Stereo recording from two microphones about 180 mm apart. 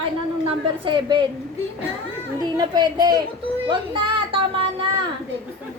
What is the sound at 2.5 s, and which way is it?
Speech, 25° right (ahead or behind).